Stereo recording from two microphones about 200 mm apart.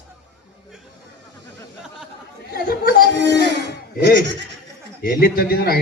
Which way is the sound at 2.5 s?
50° left (ahead or behind).